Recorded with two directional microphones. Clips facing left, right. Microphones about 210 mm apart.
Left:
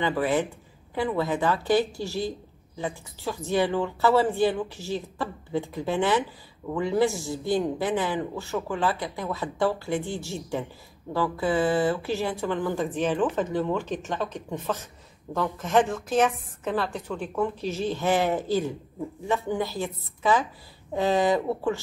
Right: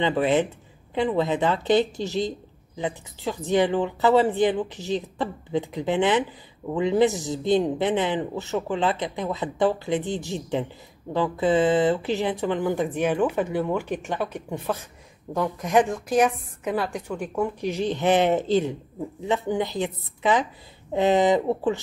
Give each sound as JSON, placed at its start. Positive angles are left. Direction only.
{"t": 0.0, "sound": "speech", "side_deg": -20}